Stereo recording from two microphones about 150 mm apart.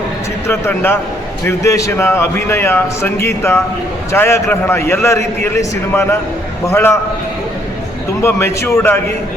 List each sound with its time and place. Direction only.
0.4 s a man's voice: 15° left (ahead or behind)
8.2 s a man's voice: 15° left (ahead or behind)